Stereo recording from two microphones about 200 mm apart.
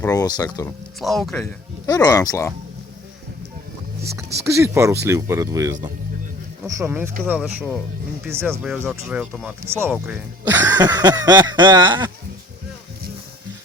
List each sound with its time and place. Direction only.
0.0 s speech: 20° left (ahead or behind)
0.9 s speech: centre (ahead or behind)
1.9 s speech: 20° left (ahead or behind)
4.4 s speech: 15° right (ahead or behind)